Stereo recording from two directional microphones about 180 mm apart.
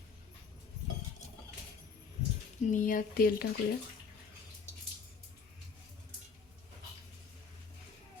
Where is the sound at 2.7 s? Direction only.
45° left (ahead or behind).